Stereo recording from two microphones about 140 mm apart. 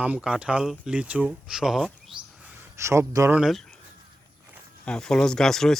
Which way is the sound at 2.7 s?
20° right (ahead or behind).